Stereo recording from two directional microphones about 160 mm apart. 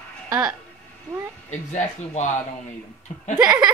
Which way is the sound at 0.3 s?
25° right (ahead or behind).